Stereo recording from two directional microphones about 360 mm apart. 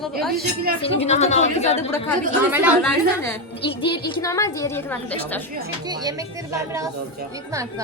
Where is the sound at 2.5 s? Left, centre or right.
Centre.